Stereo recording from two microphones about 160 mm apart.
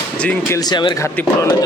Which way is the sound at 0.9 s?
20° left (ahead or behind).